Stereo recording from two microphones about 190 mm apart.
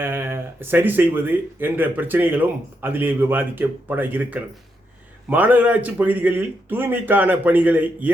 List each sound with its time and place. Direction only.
0.0 s speech: 10° right (ahead or behind)